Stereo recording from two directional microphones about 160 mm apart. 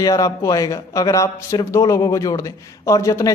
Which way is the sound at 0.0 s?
20° left (ahead or behind).